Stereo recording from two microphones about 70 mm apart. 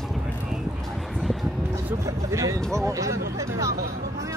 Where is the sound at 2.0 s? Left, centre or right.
Right.